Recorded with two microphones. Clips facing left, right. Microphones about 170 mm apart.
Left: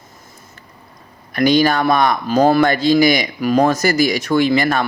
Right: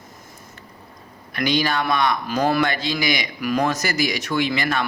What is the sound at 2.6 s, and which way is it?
Speech, 45° left (ahead or behind).